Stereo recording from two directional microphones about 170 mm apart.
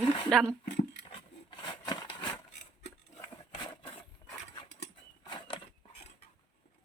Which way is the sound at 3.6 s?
25° left (ahead or behind).